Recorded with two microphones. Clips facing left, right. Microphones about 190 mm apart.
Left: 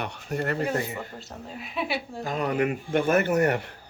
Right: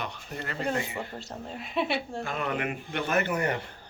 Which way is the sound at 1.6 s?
Centre (ahead or behind).